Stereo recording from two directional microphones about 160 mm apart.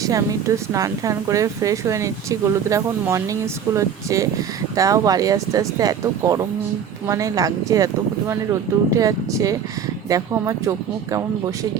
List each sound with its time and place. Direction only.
0.0 s speech: 20° right (ahead or behind)
8.9 s speech: 20° right (ahead or behind)